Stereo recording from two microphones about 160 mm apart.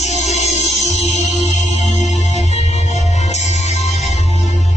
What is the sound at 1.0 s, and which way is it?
Music, 45° left (ahead or behind).